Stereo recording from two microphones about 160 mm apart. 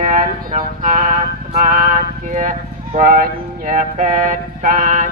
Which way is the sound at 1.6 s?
60° right (ahead or behind).